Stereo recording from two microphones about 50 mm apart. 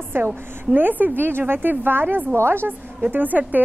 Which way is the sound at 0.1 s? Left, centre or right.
Right.